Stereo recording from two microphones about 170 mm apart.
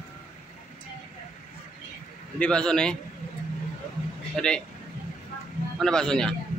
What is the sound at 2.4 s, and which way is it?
Speech, 5° left (ahead or behind).